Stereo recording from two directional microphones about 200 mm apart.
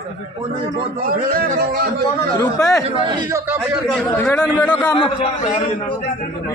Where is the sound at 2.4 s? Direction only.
15° left (ahead or behind).